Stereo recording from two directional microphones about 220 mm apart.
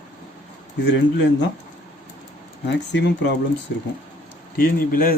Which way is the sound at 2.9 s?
50° left (ahead or behind).